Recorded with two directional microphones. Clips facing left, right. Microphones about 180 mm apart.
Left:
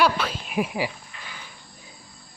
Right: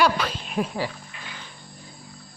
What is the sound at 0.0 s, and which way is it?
Speech, 5° left (ahead or behind).